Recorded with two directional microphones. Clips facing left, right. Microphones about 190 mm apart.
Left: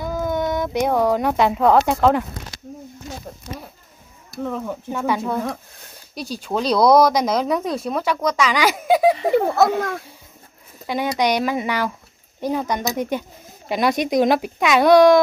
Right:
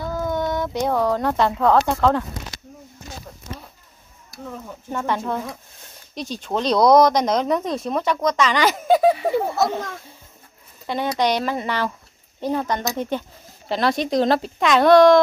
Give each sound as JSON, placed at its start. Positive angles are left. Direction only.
{"t": 0.0, "sound": "speech", "side_deg": 15}
{"t": 4.5, "sound": "speech", "side_deg": 70}
{"t": 4.9, "sound": "speech", "side_deg": 5}
{"t": 9.3, "sound": "speech", "side_deg": 60}
{"t": 10.9, "sound": "speech", "side_deg": 10}